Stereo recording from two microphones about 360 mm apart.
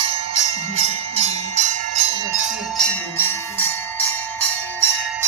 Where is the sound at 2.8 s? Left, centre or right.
Centre.